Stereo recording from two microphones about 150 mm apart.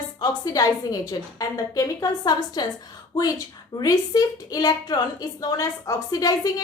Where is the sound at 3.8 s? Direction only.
25° left (ahead or behind).